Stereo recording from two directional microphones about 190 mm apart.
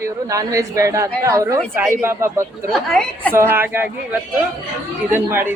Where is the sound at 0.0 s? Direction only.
15° right (ahead or behind).